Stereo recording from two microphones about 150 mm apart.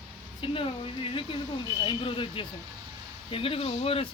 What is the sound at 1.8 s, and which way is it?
Speech, 35° left (ahead or behind).